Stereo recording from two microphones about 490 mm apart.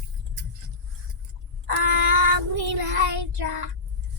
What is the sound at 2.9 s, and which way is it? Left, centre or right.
Child singing, right.